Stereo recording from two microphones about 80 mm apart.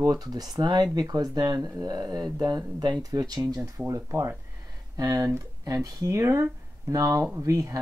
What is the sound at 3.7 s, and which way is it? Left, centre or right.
Speech, right.